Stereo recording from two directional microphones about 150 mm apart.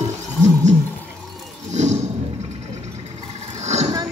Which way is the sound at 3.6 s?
50° right (ahead or behind).